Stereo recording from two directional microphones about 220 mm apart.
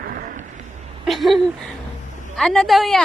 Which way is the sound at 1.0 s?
Centre (ahead or behind).